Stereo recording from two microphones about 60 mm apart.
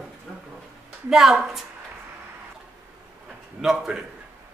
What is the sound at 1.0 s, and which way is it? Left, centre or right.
Speech, centre.